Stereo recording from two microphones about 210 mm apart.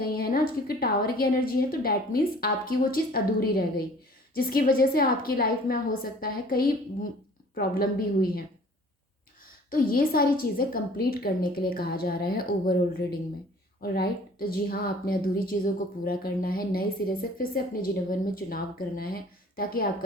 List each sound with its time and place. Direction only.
0.0 s speech: 45° left (ahead or behind)
9.6 s speech: 45° left (ahead or behind)